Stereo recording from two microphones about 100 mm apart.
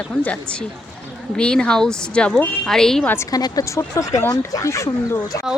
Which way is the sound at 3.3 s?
40° left (ahead or behind).